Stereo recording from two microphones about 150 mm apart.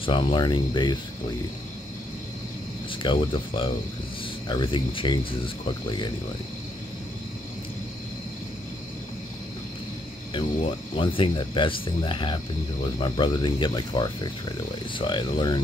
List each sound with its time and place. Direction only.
0.0 s speech: 35° left (ahead or behind)
2.9 s speech: 35° left (ahead or behind)
11.0 s speech: 35° left (ahead or behind)